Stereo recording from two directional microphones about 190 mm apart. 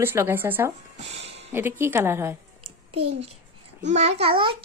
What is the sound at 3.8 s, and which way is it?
Speech, 35° right (ahead or behind).